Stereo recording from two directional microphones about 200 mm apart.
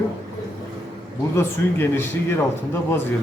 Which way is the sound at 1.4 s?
10° left (ahead or behind).